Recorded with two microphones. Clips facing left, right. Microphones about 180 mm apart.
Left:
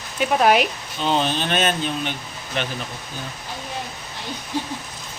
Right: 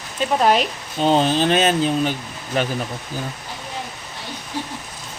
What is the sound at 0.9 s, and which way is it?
Speech, 40° right (ahead or behind).